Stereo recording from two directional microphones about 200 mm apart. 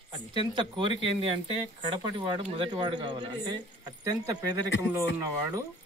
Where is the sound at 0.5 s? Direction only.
25° right (ahead or behind).